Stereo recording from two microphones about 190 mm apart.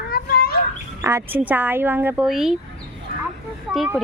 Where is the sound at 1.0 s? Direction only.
15° right (ahead or behind).